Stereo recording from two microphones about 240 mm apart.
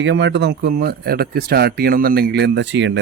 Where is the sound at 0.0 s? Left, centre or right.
Right.